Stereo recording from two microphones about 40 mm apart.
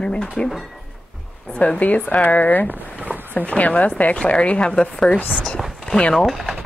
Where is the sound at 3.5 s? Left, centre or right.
Left.